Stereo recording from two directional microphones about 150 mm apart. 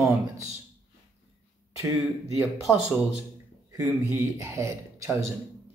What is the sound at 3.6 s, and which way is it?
A man's voice, 20° right (ahead or behind).